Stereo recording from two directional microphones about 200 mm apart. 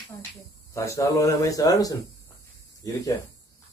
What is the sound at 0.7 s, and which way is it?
Speech, 15° left (ahead or behind).